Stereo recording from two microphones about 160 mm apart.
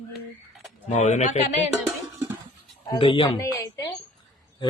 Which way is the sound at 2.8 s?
30° left (ahead or behind).